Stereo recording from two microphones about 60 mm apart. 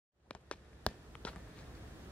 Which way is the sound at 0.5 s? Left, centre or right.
Centre.